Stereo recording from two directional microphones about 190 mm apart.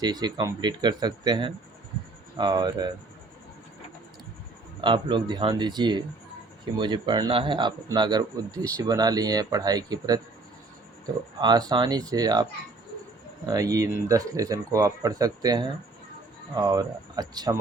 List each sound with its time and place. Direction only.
0.0 s speech: 20° right (ahead or behind)
4.8 s speech: 25° right (ahead or behind)
11.3 s speech: 20° right (ahead or behind)